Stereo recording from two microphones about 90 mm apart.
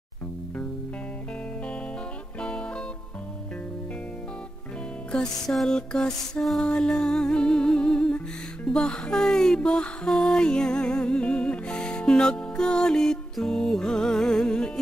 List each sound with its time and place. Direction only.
5.1 s music: 5° left (ahead or behind)